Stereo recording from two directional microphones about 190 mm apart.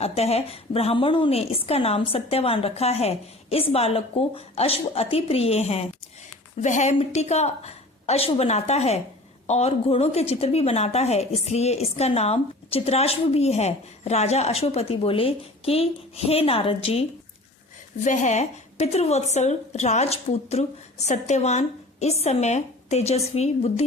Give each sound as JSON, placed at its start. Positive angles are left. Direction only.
{"t": 0.0, "sound": "a woman's voice", "side_deg": 35}